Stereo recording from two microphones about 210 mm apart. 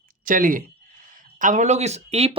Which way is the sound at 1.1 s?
35° right (ahead or behind).